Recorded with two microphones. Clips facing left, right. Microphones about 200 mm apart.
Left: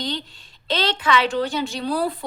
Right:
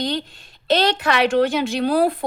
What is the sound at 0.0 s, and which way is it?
Speech, 55° right (ahead or behind).